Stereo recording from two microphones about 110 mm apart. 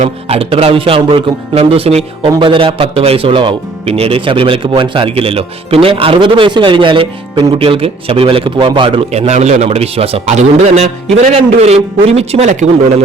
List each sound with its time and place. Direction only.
0.3 s speech: 60° right (ahead or behind)
2.4 s a man's voice: 55° right (ahead or behind)
9.1 s a man's voice: 80° right
11.3 s a man's voice: 75° right (ahead or behind)